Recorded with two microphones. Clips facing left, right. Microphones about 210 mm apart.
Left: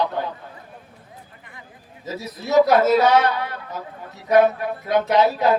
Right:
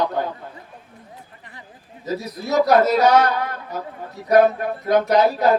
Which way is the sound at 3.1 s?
45° right (ahead or behind).